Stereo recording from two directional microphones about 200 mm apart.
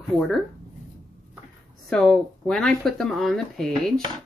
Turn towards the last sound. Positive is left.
turn(degrees=0)  # may be behind; listen again after turning